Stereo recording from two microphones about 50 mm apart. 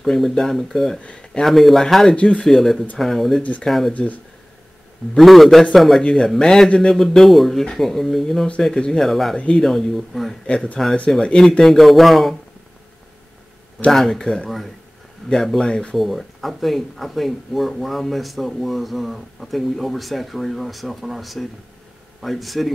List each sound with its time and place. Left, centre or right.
0.0 s speech: centre
0.9 s speech: centre
1.4 s speech: centre
2.1 s speech: left
2.4 s speech: centre
3.9 s speech: left
5.1 s speech: centre
6.0 s speech: centre
10.4 s speech: centre
13.9 s speech: centre